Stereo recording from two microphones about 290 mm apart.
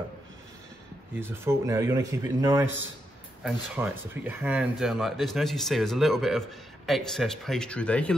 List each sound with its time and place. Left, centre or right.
1.1 s speech: centre